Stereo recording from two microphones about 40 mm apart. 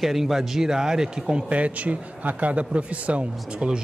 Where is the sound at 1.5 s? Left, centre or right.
Right.